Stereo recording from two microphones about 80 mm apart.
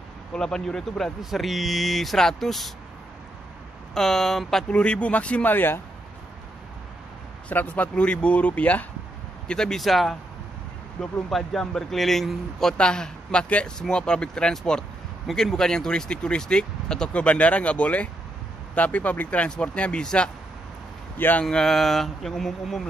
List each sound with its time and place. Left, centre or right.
0.3 s speech: centre
3.9 s speech: centre
4.6 s a man's voice: centre
7.4 s a man's voice: centre
9.5 s a man's voice: centre
21.2 s speech: left
21.5 s speech: centre